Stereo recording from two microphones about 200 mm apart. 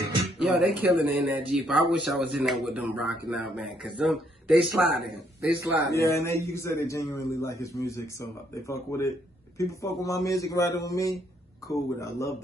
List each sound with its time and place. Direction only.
0.4 s speech: 5° right (ahead or behind)
5.9 s a man's voice: 15° left (ahead or behind)